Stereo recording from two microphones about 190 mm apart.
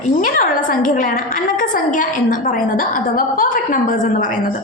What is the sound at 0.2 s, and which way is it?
A woman's voice, 45° left (ahead or behind).